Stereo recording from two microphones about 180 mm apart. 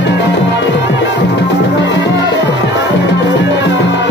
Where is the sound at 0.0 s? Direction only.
75° left (ahead or behind).